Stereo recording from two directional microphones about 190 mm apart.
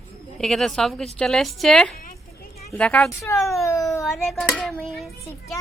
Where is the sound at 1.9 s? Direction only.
50° left (ahead or behind).